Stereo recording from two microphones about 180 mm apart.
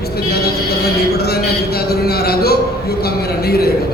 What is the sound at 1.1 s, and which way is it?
Music, 60° left (ahead or behind).